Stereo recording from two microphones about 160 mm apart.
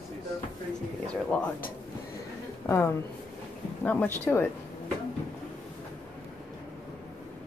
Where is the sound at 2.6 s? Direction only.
15° left (ahead or behind).